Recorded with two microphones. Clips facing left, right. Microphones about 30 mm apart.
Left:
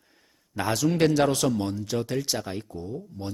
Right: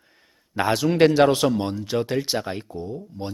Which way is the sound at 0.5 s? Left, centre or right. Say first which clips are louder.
Right 4 dB; right.